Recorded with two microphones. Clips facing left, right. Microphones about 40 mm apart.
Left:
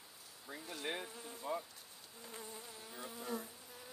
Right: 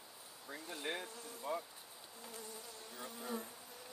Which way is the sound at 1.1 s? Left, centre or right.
Left.